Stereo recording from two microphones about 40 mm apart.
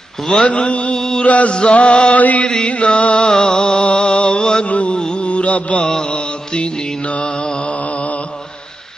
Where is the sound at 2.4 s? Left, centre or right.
Left.